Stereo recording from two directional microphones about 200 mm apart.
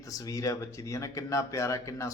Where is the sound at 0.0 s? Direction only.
15° left (ahead or behind).